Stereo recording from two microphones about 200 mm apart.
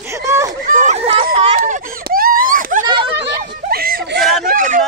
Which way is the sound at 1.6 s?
45° right (ahead or behind).